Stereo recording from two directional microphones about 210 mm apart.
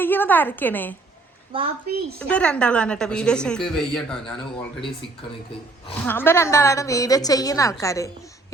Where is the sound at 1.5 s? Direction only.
25° right (ahead or behind).